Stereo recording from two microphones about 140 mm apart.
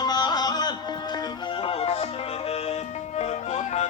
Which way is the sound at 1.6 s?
45° left (ahead or behind).